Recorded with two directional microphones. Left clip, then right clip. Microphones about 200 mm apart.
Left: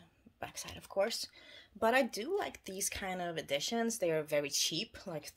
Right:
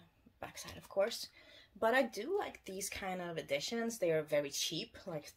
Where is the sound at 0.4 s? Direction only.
40° left (ahead or behind).